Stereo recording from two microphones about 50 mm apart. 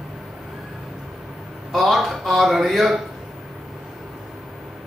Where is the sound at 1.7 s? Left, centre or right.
Centre.